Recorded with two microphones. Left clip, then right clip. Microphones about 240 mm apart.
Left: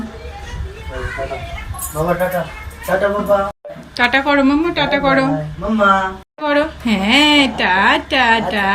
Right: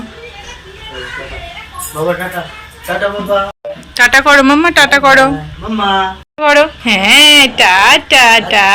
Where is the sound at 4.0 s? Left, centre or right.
Centre.